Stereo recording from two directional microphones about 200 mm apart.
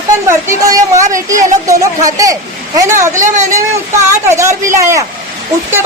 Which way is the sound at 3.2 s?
35° right (ahead or behind).